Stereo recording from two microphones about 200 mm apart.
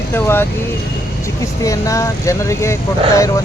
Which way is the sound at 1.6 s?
15° left (ahead or behind).